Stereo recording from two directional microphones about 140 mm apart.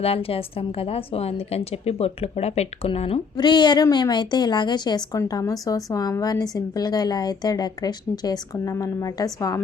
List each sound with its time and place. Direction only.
0.0 s a woman's voice: 45° left (ahead or behind)
3.3 s a woman's voice: 30° left (ahead or behind)